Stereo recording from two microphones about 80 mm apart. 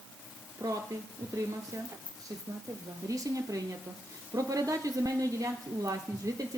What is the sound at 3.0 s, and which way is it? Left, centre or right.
A woman's voice, right.